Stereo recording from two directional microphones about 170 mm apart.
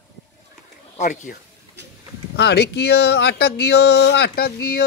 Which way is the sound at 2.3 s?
80° left.